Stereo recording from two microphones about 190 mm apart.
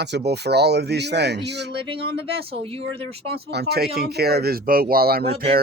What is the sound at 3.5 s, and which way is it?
Speech, 60° right (ahead or behind).